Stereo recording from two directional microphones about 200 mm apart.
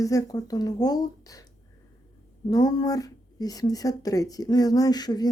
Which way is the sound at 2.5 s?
20° left (ahead or behind).